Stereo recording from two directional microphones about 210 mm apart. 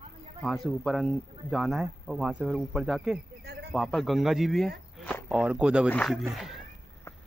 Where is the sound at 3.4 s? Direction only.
50° right (ahead or behind).